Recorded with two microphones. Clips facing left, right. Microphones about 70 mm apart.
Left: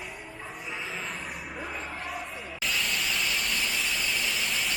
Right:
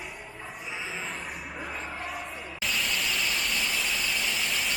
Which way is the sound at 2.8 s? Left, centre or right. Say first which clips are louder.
Right 1 dB; centre.